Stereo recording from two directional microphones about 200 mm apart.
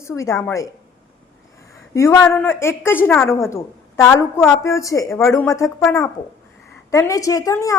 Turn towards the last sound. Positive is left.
turn(degrees=15)  # may be behind; listen again after turning